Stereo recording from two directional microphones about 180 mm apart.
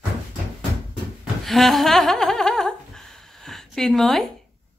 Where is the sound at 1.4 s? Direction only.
Centre (ahead or behind).